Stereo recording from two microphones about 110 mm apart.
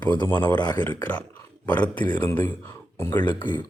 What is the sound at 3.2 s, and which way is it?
Speech, 45° left (ahead or behind).